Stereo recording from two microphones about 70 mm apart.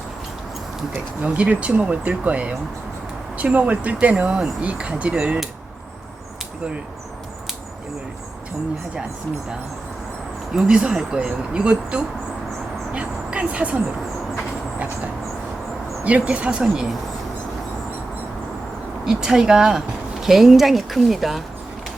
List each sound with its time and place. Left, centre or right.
0.9 s speech: centre
10.5 s speech: centre
16.0 s speech: centre
19.0 s speech: centre